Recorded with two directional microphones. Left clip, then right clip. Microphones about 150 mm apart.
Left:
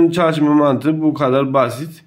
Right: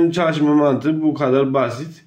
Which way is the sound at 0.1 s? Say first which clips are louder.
Left 2 dB; 30° left (ahead or behind).